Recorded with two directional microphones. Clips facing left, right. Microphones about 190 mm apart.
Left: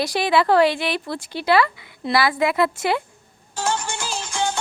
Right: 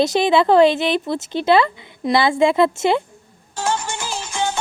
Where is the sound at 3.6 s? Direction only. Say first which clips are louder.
Right 2 dB; 15° right (ahead or behind).